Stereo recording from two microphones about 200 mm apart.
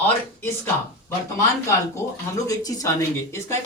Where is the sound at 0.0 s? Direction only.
10° left (ahead or behind).